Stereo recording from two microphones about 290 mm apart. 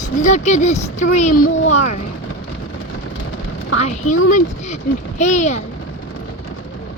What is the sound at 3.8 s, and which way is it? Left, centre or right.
Speech, left.